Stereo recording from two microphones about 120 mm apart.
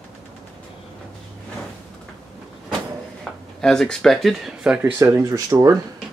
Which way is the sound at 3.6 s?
5° left (ahead or behind).